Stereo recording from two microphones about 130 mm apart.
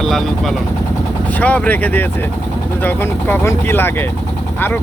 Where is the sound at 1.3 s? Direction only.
10° left (ahead or behind).